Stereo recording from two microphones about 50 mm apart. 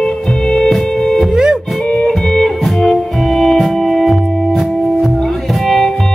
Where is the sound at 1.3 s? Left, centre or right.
Centre.